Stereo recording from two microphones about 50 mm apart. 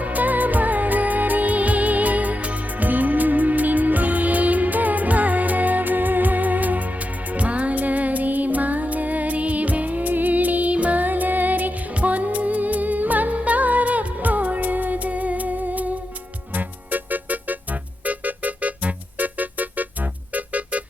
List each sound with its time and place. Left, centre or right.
0.0 s music: right